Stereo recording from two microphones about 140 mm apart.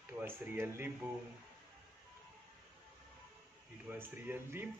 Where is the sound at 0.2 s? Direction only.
15° right (ahead or behind).